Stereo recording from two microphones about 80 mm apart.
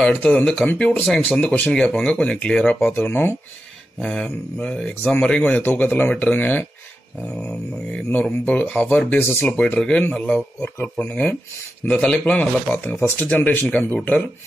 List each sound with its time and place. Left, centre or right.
0.1 s speech: left
2.9 s speech: left
4.0 s speech: centre
10.6 s speech: left